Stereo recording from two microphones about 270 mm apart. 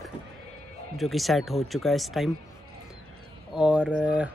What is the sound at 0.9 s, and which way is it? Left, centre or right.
Speech, centre.